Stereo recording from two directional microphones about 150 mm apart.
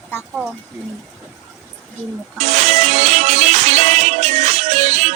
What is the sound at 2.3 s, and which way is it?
Music, 50° right (ahead or behind).